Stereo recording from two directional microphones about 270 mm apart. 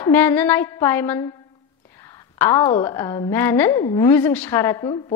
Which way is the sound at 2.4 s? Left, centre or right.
Centre.